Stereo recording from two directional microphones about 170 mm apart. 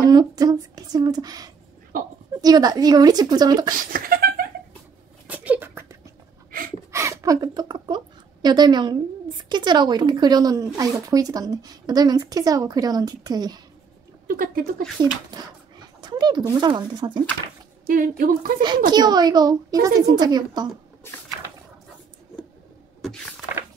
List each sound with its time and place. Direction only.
0.0 s a woman's voice: 20° right (ahead or behind)
3.9 s a sound: 60° right (ahead or behind)
5.2 s a sound: 10° right (ahead or behind)
6.9 s a woman's voice: 15° right (ahead or behind)
14.2 s speech: 55° right (ahead or behind)
15.0 s a woman's voice: 25° right (ahead or behind)
17.8 s a woman's voice: 60° right (ahead or behind)
18.9 s a woman's voice: 25° right (ahead or behind)